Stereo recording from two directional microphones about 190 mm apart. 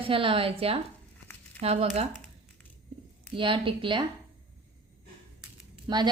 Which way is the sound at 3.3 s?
25° right (ahead or behind).